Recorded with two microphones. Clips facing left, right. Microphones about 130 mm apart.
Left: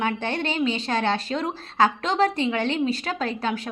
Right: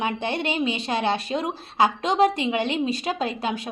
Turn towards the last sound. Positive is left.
turn(degrees=-15)  # may be behind; listen again after turning